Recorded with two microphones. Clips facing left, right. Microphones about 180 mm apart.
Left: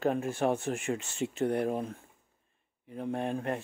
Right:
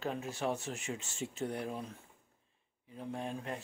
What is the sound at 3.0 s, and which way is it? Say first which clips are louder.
Speech: left 7 dB; 60° left (ahead or behind).